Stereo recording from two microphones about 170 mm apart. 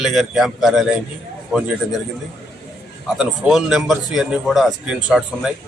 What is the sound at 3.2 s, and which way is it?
Speech, 5° right (ahead or behind).